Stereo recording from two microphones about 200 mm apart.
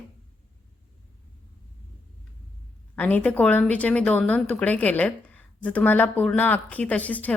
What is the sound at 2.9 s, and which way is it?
A woman's voice, 5° left (ahead or behind).